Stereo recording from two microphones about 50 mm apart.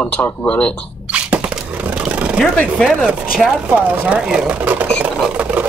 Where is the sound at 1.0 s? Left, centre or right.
Right.